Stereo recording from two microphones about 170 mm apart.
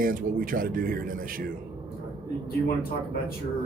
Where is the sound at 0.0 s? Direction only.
55° right (ahead or behind).